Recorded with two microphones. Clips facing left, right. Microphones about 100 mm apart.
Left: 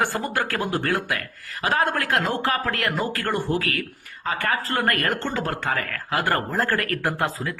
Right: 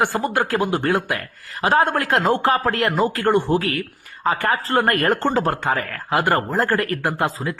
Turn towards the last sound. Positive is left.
turn(degrees=-20)  # may be behind; listen again after turning